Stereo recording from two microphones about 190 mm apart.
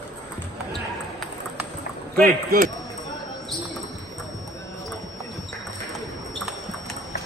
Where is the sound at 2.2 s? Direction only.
50° right (ahead or behind).